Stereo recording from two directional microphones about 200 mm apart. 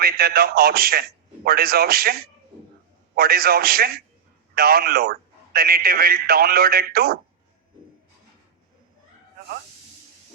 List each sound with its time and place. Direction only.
0.0 s speech: 50° right (ahead or behind)